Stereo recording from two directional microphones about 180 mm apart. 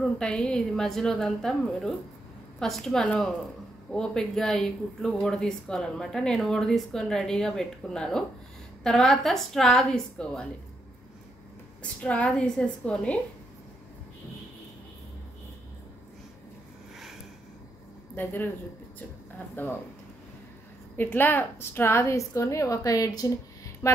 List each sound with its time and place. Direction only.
0.0 s speech: 5° left (ahead or behind)
11.8 s a woman's voice: 5° left (ahead or behind)
18.1 s speech: 10° left (ahead or behind)
19.5 s a woman's voice: 10° left (ahead or behind)
20.9 s a woman's voice: 10° left (ahead or behind)